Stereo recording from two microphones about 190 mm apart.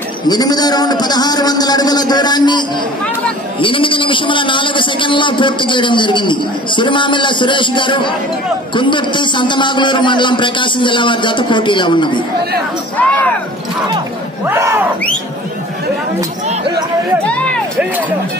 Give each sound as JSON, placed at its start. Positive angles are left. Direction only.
{"t": 0.3, "sound": "a man's voice", "side_deg": 20}
{"t": 12.9, "sound": "speech", "side_deg": 10}
{"t": 14.5, "sound": "a sound", "side_deg": -15}
{"t": 17.2, "sound": "music", "side_deg": 5}